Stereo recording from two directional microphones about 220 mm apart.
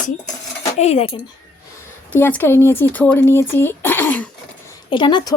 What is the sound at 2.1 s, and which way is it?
A woman's voice, 10° left (ahead or behind).